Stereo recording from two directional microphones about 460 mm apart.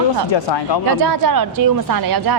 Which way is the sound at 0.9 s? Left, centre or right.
Right.